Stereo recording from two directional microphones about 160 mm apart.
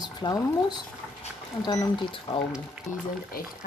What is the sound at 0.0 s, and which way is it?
Speech, 25° left (ahead or behind).